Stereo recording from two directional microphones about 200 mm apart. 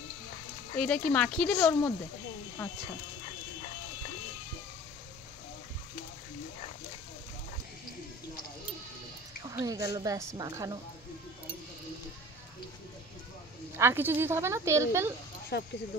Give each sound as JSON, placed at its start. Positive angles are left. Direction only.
{"t": 0.7, "sound": "speech", "side_deg": 5}
{"t": 9.5, "sound": "speech", "side_deg": -15}
{"t": 13.7, "sound": "speech", "side_deg": -10}
{"t": 15.5, "sound": "speech", "side_deg": 55}